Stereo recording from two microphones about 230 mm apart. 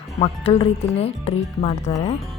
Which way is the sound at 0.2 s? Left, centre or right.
Left.